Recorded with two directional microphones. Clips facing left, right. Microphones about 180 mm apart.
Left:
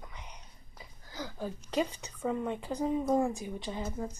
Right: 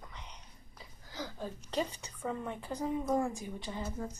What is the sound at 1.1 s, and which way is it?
A woman's voice, 10° left (ahead or behind).